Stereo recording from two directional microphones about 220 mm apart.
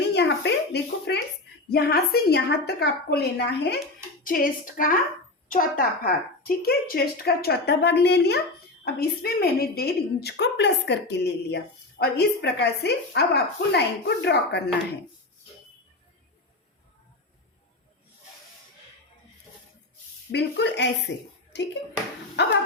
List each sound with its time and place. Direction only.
0.1 s a sound: 50° left (ahead or behind)
1.7 s a woman's voice: 45° left (ahead or behind)
20.3 s a woman's voice: 50° left (ahead or behind)
22.4 s a woman's voice: 50° left (ahead or behind)